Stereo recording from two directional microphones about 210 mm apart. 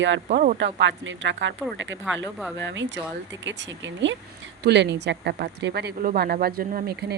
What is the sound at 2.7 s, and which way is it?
A woman's voice, 60° right (ahead or behind).